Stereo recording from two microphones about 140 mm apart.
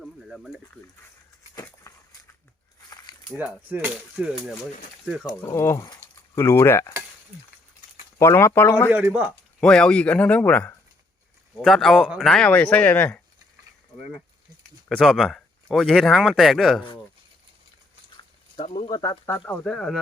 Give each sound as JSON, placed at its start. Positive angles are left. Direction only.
{"t": 0.0, "sound": "a sound", "side_deg": 0}
{"t": 1.9, "sound": "a sound", "side_deg": 20}
{"t": 3.3, "sound": "speech", "side_deg": -10}
{"t": 5.4, "sound": "speech", "side_deg": 20}
{"t": 8.2, "sound": "speech", "side_deg": 20}
{"t": 8.9, "sound": "speech", "side_deg": -10}
{"t": 9.6, "sound": "speech", "side_deg": 5}
{"t": 14.8, "sound": "speech", "side_deg": 0}
{"t": 18.9, "sound": "speech", "side_deg": 25}
{"t": 19.2, "sound": "speech", "side_deg": 15}
{"t": 19.6, "sound": "speech", "side_deg": 5}